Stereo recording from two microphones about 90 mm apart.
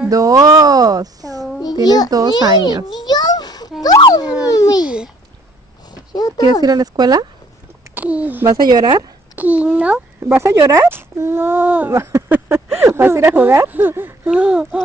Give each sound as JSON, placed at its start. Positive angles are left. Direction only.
{"t": 0.1, "sound": "speech", "side_deg": -40}
{"t": 2.9, "sound": "a sound", "side_deg": 55}
{"t": 4.0, "sound": "dog", "side_deg": 45}
{"t": 4.5, "sound": "babbling", "side_deg": 45}
{"t": 4.8, "sound": "a sound", "side_deg": -10}
{"t": 6.1, "sound": "speech", "side_deg": 45}
{"t": 6.6, "sound": "speech", "side_deg": -45}
{"t": 7.9, "sound": "speech", "side_deg": -15}
{"t": 8.5, "sound": "speech", "side_deg": -50}
{"t": 9.3, "sound": "a child's voice", "side_deg": -15}
{"t": 10.4, "sound": "speech", "side_deg": -30}
{"t": 11.9, "sound": "speech", "side_deg": -30}
{"t": 14.3, "sound": "speech", "side_deg": -10}